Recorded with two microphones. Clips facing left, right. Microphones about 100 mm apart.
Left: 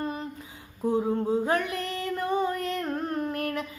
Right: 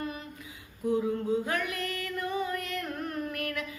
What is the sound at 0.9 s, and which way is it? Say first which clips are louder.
Female singing: left 3 dB; 30° left (ahead or behind).